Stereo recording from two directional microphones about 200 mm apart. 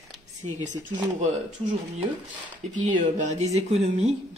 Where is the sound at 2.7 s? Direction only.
40° right (ahead or behind).